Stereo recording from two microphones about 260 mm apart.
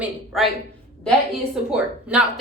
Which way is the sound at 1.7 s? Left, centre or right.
Centre.